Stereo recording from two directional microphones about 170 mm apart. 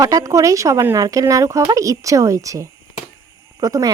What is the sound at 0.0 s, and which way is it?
A woman's voice, 20° right (ahead or behind).